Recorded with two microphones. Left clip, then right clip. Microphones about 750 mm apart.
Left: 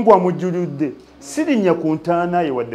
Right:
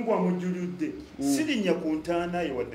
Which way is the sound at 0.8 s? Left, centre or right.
Left.